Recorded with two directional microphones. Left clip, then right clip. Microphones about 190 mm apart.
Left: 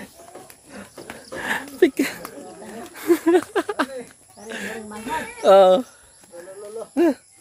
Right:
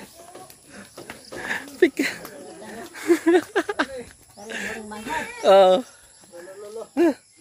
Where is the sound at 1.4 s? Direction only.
15° left (ahead or behind).